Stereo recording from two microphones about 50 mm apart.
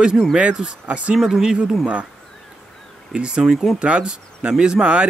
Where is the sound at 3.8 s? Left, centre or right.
Right.